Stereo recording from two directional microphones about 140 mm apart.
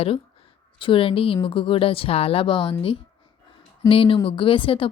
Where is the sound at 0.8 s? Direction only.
40° left (ahead or behind).